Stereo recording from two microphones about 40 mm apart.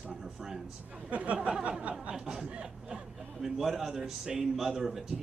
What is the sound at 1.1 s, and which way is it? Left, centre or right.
Speech, right.